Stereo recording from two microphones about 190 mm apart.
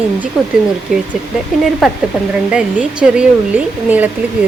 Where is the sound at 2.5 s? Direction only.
5° right (ahead or behind).